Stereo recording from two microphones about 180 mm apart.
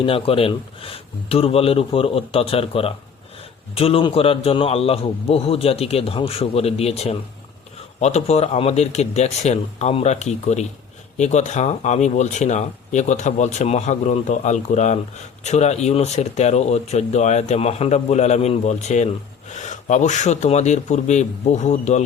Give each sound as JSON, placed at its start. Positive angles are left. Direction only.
{"t": 0.0, "sound": "speech", "side_deg": 30}